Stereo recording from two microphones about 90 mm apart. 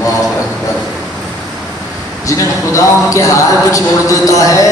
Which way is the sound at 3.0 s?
35° left (ahead or behind).